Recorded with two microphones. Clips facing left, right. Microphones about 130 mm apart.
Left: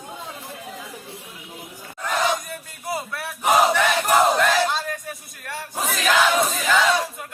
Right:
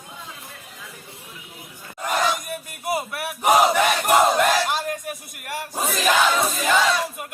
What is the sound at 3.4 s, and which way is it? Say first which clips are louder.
Battle cry: right 1 dB; 10° right (ahead or behind).